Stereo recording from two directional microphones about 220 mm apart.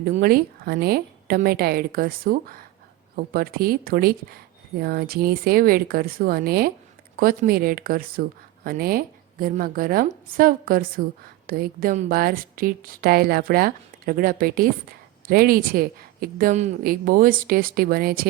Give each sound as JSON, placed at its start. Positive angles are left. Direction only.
{"t": 0.0, "sound": "a woman's voice", "side_deg": -45}